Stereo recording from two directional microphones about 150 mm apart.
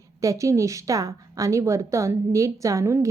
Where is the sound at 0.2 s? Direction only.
20° right (ahead or behind).